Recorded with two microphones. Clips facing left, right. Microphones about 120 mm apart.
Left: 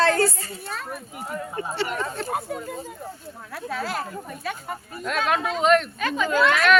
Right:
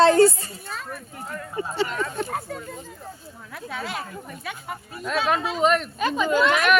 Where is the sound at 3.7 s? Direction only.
Centre (ahead or behind).